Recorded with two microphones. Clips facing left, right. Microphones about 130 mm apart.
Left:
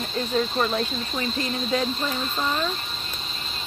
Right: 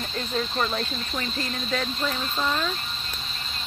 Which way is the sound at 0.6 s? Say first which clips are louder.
Left 3 dB; 20° left (ahead or behind).